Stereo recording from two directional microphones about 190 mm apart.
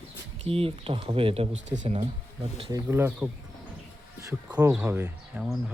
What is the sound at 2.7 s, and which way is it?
Speech, 10° right (ahead or behind).